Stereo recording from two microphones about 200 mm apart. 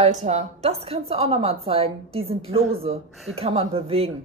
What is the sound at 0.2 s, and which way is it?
A woman's voice, 35° right (ahead or behind).